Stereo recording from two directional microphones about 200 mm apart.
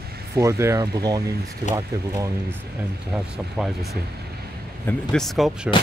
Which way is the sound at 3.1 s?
5° right (ahead or behind).